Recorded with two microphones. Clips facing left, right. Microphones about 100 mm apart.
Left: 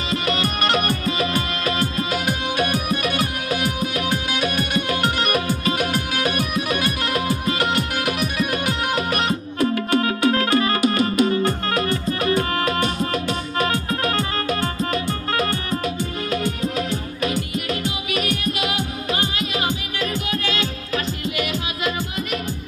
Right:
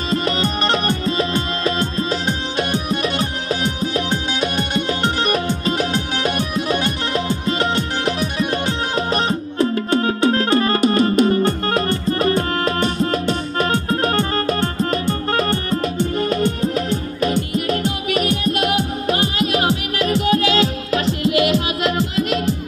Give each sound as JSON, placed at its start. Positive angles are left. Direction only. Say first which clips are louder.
{"t": 0.1, "sound": "music", "louder": "right 3 dB", "side_deg": -30}
{"t": 18.5, "sound": "music", "louder": "right 5 dB", "side_deg": -55}
{"t": 21.0, "sound": "music", "louder": "right 11 dB", "side_deg": -90}